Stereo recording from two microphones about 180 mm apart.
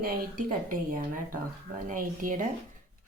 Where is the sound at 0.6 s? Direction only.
50° right (ahead or behind).